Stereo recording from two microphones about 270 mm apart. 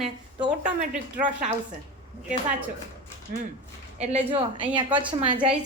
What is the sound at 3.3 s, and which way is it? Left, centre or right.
A woman's voice, right.